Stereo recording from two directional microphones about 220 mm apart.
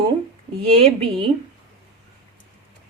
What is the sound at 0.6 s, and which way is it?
Speech, 25° right (ahead or behind).